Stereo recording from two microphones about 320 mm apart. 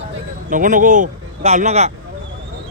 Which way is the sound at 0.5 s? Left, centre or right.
Right.